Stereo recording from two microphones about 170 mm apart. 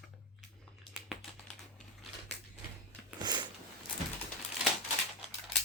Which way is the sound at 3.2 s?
25° right (ahead or behind).